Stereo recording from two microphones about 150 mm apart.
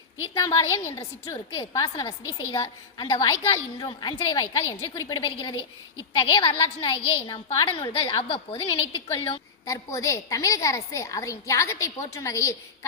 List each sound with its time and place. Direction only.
0.3 s a woman's voice: 20° left (ahead or behind); by 9.4 s 35° left (ahead or behind)
9.6 s a woman's voice: 20° left (ahead or behind)